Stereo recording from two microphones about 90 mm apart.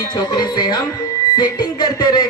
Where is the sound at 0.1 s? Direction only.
55° left (ahead or behind).